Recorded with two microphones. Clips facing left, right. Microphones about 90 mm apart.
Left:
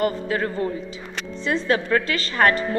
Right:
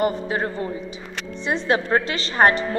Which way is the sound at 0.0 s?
25° right (ahead or behind).